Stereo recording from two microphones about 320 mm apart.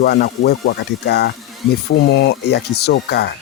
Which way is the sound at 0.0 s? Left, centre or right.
Left.